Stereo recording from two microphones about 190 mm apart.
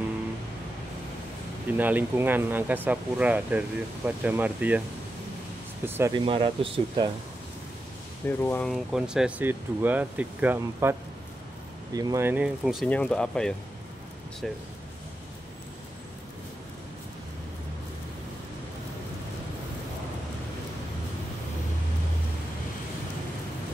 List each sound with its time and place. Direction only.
1.7 s speech: 10° right (ahead or behind)
5.9 s speech: 10° right (ahead or behind)
6.1 s speech: 25° right (ahead or behind)
8.3 s speech: 10° left (ahead or behind)
8.7 s speech: 5° right (ahead or behind)